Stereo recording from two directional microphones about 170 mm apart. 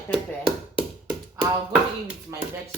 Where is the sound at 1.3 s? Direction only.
20° right (ahead or behind).